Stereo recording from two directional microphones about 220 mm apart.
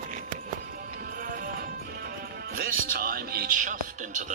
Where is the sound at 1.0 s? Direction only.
40° right (ahead or behind).